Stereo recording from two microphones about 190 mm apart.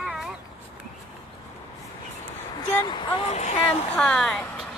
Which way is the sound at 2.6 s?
25° left (ahead or behind).